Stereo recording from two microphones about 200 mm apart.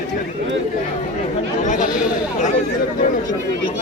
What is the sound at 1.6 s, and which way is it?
Chatter, 40° left (ahead or behind).